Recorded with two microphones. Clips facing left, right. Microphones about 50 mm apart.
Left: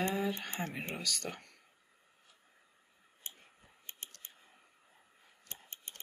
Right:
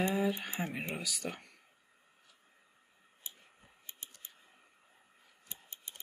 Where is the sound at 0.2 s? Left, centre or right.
Centre.